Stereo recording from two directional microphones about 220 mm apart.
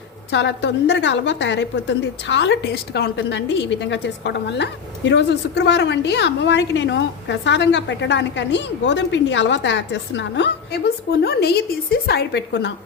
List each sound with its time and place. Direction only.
0.3 s a woman's voice: 50° left (ahead or behind)